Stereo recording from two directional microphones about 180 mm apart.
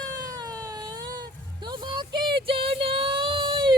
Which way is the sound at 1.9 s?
25° right (ahead or behind).